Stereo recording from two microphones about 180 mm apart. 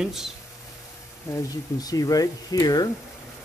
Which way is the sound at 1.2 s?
15° left (ahead or behind).